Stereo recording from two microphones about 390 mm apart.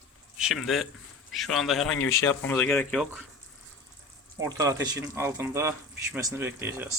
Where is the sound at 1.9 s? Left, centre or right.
Left.